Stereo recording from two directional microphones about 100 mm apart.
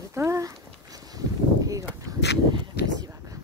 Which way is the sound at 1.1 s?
35° right (ahead or behind).